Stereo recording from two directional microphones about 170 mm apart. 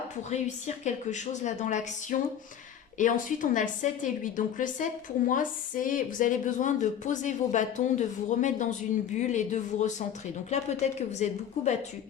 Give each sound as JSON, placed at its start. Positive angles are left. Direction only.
{"t": 0.3, "sound": "a woman's voice", "side_deg": 45}